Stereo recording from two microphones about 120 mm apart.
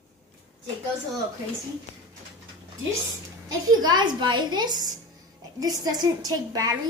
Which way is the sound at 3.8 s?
35° right (ahead or behind).